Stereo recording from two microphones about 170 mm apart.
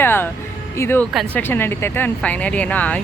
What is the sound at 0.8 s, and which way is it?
Speech, 15° left (ahead or behind).